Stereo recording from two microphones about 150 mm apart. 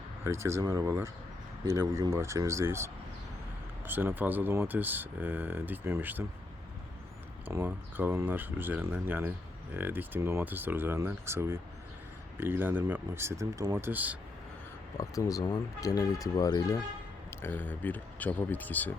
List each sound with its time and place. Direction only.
0.3 s speech: 20° right (ahead or behind)
7.4 s speech: 15° right (ahead or behind)
14.9 s speech: 20° left (ahead or behind)
17.4 s speech: 15° left (ahead or behind)